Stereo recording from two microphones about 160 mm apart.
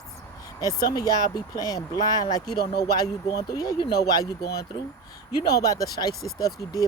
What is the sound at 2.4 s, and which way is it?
Speech, 75° left (ahead or behind).